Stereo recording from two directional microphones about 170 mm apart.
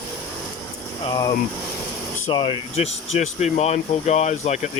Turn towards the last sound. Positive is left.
turn(degrees=40)  # may be behind; listen again after turning